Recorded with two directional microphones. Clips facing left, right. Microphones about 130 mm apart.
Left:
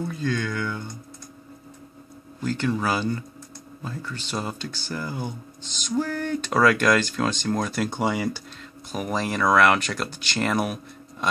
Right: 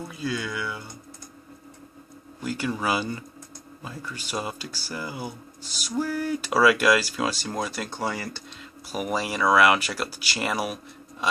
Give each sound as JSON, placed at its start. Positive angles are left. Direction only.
{"t": 0.0, "sound": "speech", "side_deg": -10}
{"t": 2.4, "sound": "speech", "side_deg": -10}
{"t": 7.9, "sound": "speech", "side_deg": 15}
{"t": 8.9, "sound": "speech", "side_deg": -5}